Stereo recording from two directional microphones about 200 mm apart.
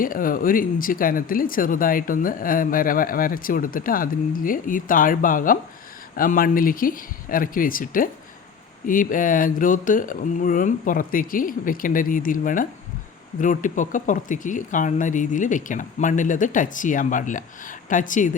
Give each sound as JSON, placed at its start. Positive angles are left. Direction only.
{"t": 0.0, "sound": "speech", "side_deg": 45}